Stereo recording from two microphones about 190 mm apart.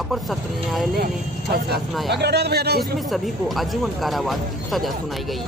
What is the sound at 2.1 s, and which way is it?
Speech, 60° right (ahead or behind).